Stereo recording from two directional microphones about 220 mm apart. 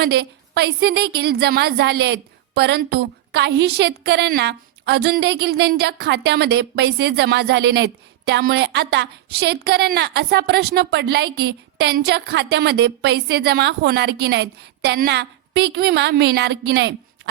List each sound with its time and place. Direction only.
0.0 s a woman's voice: 45° right (ahead or behind)